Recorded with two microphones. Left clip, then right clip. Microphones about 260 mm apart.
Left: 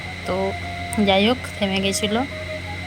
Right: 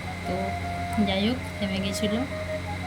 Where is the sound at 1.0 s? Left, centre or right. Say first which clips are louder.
Left 12 dB; centre.